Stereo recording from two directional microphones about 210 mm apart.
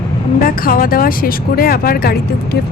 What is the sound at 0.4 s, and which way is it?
A woman's voice, 45° left (ahead or behind).